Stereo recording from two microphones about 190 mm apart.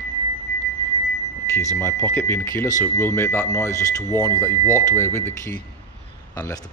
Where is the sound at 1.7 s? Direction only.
10° left (ahead or behind).